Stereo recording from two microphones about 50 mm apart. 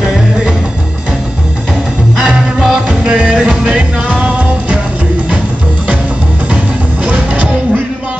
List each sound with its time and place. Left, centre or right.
2.1 s music: centre
7.1 s music: right